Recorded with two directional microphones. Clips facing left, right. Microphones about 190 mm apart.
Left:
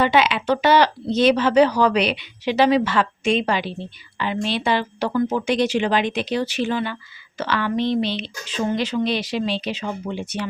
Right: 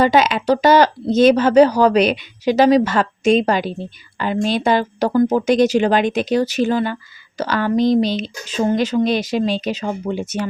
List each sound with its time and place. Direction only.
0.0 s speech: 40° right (ahead or behind)